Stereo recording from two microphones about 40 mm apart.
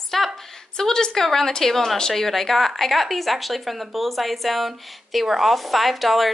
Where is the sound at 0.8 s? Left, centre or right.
Centre.